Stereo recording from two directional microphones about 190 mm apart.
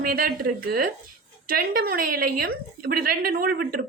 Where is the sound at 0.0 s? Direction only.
50° right (ahead or behind).